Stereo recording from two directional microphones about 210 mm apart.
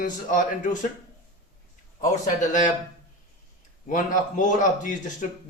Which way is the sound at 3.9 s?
40° left (ahead or behind).